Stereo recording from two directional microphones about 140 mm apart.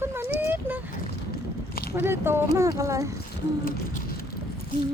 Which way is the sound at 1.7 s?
90° left.